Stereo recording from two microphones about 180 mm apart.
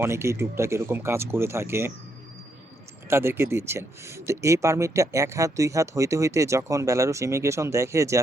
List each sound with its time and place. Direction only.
0.0 s speech: 15° right (ahead or behind)
3.1 s speech: 15° right (ahead or behind)